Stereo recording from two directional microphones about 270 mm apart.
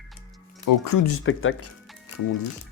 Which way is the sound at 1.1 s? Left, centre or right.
Left.